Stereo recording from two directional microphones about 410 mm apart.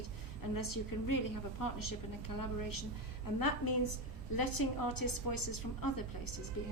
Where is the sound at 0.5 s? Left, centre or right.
Left.